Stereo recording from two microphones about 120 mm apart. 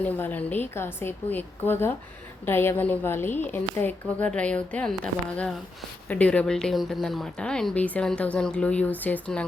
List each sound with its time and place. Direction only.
0.0 s speech: 15° left (ahead or behind)